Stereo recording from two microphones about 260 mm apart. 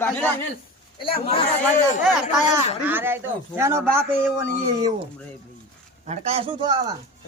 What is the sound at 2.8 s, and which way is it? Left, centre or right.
Speech, centre.